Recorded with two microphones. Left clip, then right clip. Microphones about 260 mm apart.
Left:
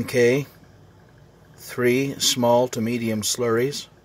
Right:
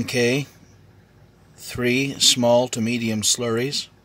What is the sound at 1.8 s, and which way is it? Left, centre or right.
Speech, centre.